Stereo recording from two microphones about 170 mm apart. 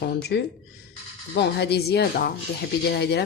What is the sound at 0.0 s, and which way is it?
Speech, 75° left (ahead or behind).